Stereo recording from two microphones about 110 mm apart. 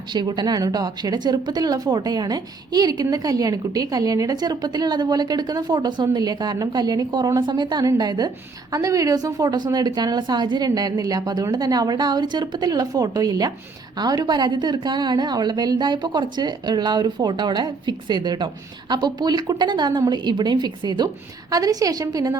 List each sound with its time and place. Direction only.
0.1 s a woman's voice: 45° right (ahead or behind)